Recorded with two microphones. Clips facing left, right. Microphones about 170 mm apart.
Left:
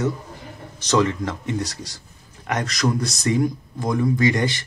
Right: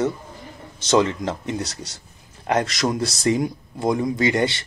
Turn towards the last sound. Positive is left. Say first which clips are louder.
# even
turn(degrees=-30)  # may be behind; listen again after turning